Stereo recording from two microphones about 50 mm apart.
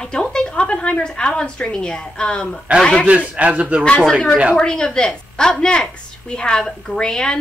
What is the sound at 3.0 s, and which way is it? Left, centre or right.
Speech, right.